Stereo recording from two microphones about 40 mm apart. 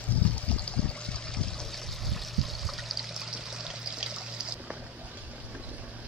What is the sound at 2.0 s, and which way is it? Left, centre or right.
Pour, centre.